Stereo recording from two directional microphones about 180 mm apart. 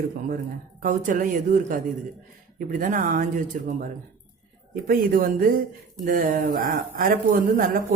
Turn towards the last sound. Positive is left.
turn(degrees=-50)  # may be behind; listen again after turning